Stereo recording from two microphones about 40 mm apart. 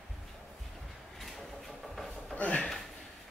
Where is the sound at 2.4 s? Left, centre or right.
Left.